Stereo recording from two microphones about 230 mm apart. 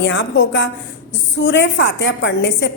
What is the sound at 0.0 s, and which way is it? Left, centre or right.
A woman's voice, left.